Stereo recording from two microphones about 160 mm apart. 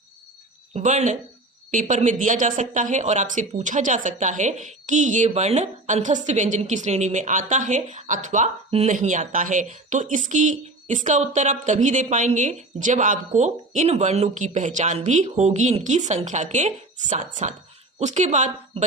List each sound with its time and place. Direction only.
0.7 s speech: 45° right (ahead or behind)